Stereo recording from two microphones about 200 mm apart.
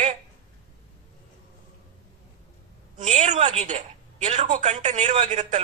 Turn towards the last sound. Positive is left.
turn(degrees=-35)  # may be behind; listen again after turning